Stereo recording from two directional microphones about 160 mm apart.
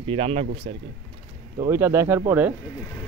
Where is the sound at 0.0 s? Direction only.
35° right (ahead or behind).